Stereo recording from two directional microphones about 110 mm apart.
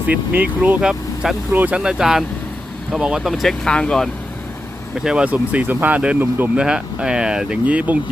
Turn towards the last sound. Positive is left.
turn(degrees=-15)  # may be behind; listen again after turning